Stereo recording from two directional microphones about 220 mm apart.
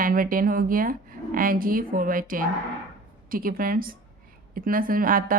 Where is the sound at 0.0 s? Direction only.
40° right (ahead or behind).